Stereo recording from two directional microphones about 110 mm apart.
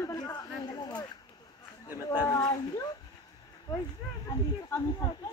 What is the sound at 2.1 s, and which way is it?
Speech, 35° left (ahead or behind).